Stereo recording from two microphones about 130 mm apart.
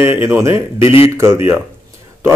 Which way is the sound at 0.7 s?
45° left (ahead or behind).